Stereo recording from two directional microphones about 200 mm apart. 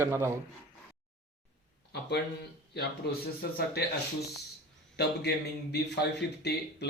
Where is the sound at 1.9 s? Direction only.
55° left (ahead or behind).